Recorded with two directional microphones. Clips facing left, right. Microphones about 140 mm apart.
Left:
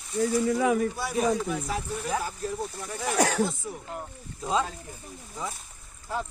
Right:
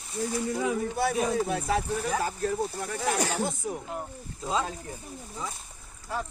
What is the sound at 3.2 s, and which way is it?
Speech, 75° left (ahead or behind).